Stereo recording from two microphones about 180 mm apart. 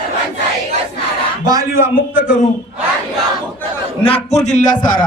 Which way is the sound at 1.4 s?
20° right (ahead or behind).